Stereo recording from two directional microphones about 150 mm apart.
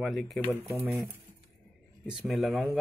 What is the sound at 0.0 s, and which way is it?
Speech, centre (ahead or behind).